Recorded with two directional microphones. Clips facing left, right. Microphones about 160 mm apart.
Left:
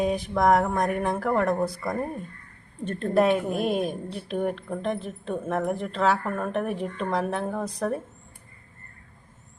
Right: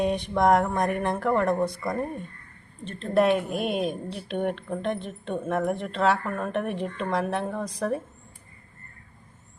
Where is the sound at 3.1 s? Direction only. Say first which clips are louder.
Even; centre (ahead or behind).